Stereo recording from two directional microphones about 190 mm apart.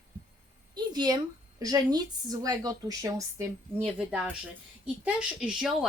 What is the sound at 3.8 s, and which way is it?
Speech, 5° right (ahead or behind).